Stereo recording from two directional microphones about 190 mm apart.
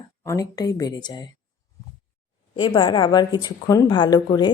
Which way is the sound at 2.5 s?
25° left (ahead or behind).